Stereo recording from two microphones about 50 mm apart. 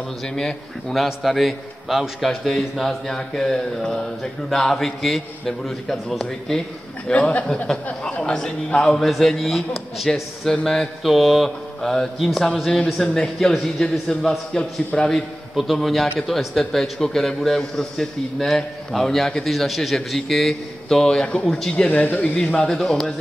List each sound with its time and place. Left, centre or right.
0.4 s a man's voice: centre
7.1 s a man's voice: left
15.5 s a man's voice: centre
21.8 s speech: left
22.7 s a man's voice: centre